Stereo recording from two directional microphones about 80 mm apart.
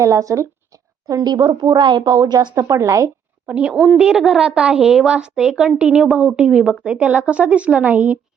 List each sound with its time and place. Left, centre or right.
0.0 s speech: right
1.0 s speech: right
1.7 s a woman's voice: right
2.0 s a woman's voice: right
2.6 s a woman's voice: right
3.4 s a woman's voice: centre